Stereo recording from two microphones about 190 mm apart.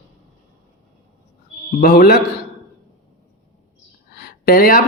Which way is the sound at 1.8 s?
50° left (ahead or behind).